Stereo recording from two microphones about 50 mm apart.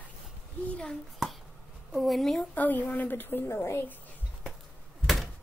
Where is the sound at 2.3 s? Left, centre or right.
Left.